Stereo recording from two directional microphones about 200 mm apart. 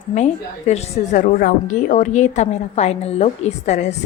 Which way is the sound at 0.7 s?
35° left (ahead or behind).